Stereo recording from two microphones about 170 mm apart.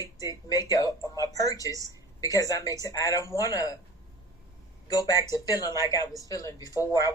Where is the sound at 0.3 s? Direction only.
20° left (ahead or behind).